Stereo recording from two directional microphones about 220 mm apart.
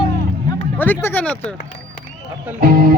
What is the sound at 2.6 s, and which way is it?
Speech, 40° right (ahead or behind).